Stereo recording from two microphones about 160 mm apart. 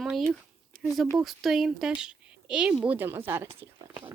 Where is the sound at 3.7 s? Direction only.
30° right (ahead or behind).